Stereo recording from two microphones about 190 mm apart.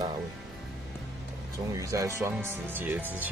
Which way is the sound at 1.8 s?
15° right (ahead or behind).